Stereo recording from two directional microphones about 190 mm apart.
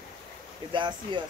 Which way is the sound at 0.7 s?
25° right (ahead or behind).